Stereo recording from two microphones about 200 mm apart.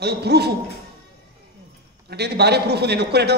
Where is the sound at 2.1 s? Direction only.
55° right (ahead or behind).